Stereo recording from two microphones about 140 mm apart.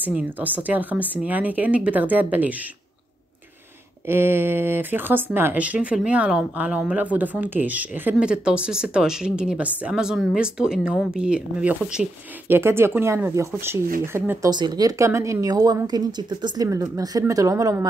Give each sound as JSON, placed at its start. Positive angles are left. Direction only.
{"t": 0.0, "sound": "speech", "side_deg": -10}
{"t": 4.1, "sound": "speech", "side_deg": -15}
{"t": 14.5, "sound": "a woman's voice", "side_deg": -30}